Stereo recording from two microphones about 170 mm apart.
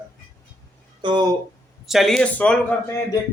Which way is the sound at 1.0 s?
30° right (ahead or behind).